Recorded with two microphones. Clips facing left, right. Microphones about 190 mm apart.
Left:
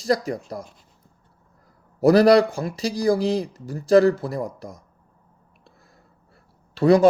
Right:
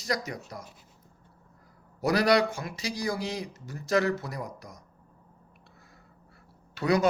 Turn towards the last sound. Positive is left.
turn(degrees=30)  # may be behind; listen again after turning